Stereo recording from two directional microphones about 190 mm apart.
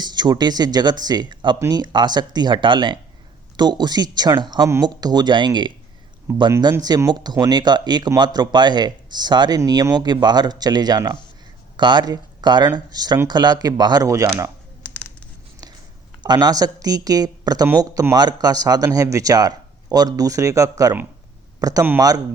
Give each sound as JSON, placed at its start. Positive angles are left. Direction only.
{"t": 0.0, "sound": "speech", "side_deg": -20}
{"t": 14.8, "sound": "a sound", "side_deg": 5}
{"t": 16.2, "sound": "speech", "side_deg": -20}